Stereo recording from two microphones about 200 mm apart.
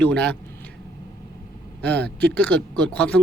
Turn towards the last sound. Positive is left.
turn(degrees=5)  # may be behind; listen again after turning